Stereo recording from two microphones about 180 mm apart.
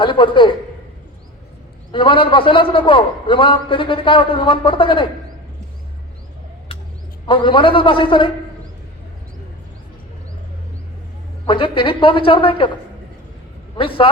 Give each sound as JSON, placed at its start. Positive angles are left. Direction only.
{"t": 0.0, "sound": "a man's voice", "side_deg": 25}
{"t": 1.9, "sound": "a man's voice", "side_deg": 30}
{"t": 7.3, "sound": "a man's voice", "side_deg": 25}
{"t": 11.4, "sound": "a man's voice", "side_deg": 30}
{"t": 13.7, "sound": "a man's voice", "side_deg": 30}